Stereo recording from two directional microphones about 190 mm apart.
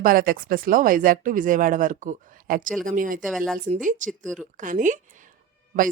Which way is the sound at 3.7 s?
40° right (ahead or behind).